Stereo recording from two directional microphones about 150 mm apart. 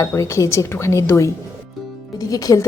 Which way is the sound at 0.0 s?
20° left (ahead or behind).